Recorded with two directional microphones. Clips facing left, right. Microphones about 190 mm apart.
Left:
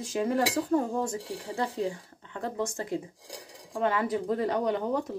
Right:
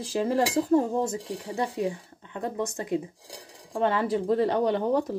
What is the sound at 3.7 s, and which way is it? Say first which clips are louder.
Cutlery: right 3 dB; 30° right (ahead or behind).